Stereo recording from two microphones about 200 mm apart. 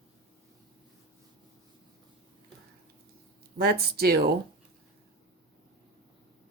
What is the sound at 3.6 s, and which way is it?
Speech, 50° right (ahead or behind).